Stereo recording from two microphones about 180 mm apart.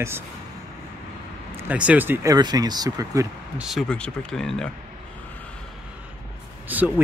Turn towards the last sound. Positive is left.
turn(degrees=-10)  # may be behind; listen again after turning